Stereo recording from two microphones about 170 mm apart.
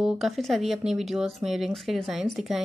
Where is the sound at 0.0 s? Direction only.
Centre (ahead or behind).